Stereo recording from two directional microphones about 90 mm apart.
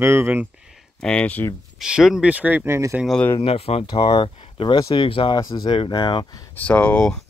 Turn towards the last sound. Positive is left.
turn(degrees=10)  # may be behind; listen again after turning